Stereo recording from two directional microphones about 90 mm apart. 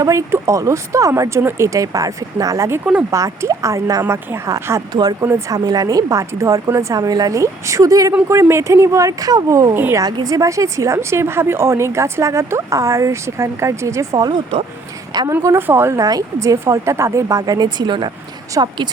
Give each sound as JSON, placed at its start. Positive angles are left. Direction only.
{"t": 0.0, "sound": "a woman's voice", "side_deg": -35}
{"t": 4.0, "sound": "speech", "side_deg": -25}
{"t": 4.9, "sound": "a woman's voice", "side_deg": -50}
{"t": 14.3, "sound": "speech", "side_deg": -55}
{"t": 15.3, "sound": "speech", "side_deg": -25}
{"t": 16.0, "sound": "a woman's voice", "side_deg": -40}